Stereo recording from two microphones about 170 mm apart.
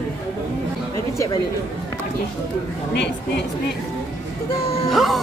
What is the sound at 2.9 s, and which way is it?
Speech, 90° left.